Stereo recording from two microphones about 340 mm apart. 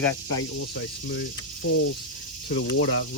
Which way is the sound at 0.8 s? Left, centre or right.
Left.